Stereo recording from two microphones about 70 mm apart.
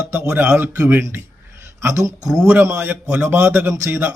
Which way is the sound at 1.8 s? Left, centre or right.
Right.